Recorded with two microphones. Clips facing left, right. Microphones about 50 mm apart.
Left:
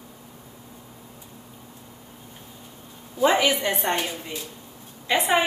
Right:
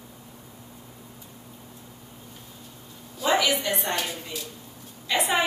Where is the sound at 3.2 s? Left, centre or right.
Left.